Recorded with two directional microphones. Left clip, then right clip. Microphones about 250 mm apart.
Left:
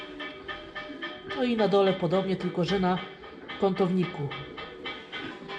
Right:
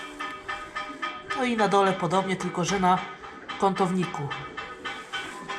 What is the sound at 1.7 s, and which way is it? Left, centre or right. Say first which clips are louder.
Speech: right 1 dB; centre.